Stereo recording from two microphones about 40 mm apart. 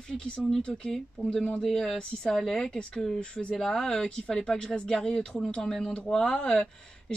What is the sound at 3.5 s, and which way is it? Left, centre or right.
Speech, centre.